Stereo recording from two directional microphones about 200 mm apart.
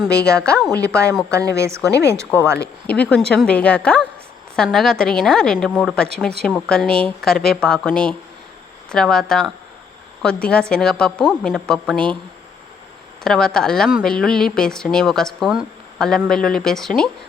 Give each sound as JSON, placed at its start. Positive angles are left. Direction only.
{"t": 0.3, "sound": "speech", "side_deg": 5}
{"t": 0.7, "sound": "speech", "side_deg": -15}
{"t": 2.8, "sound": "speech", "side_deg": 5}
{"t": 13.2, "sound": "speech", "side_deg": 0}